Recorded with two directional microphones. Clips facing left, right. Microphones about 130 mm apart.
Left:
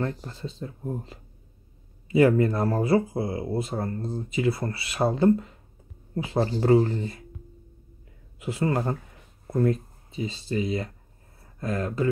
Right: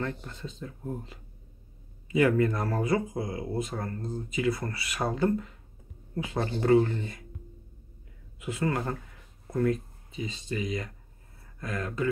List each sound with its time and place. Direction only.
0.2 s speech: 35° left (ahead or behind)
2.1 s speech: 30° left (ahead or behind)
8.4 s speech: 30° left (ahead or behind)